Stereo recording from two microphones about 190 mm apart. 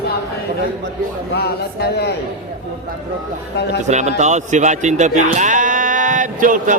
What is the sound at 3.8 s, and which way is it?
Speech, 35° right (ahead or behind).